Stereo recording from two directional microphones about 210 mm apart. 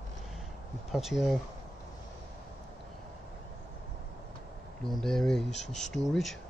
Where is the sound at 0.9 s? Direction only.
Centre (ahead or behind).